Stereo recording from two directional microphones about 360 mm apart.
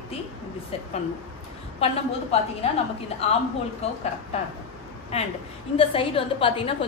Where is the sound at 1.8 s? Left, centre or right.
Centre.